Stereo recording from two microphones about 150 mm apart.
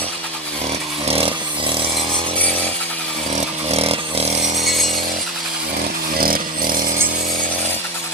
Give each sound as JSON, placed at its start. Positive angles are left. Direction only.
{"t": 1.0, "sound": "chainsaw", "side_deg": -40}
{"t": 3.7, "sound": "a sound", "side_deg": -40}
{"t": 6.1, "sound": "chainsaw", "side_deg": -80}